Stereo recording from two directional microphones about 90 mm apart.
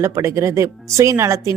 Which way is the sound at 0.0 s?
35° right (ahead or behind).